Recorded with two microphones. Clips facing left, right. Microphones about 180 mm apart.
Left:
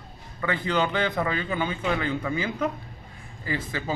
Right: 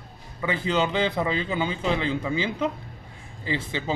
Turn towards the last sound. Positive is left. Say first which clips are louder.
# right 1 dB
turn(degrees=-25)  # may be behind; listen again after turning